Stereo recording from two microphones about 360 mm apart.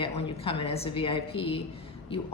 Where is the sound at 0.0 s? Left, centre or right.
Centre.